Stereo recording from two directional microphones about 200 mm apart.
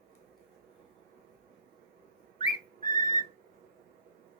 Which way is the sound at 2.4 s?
20° left (ahead or behind).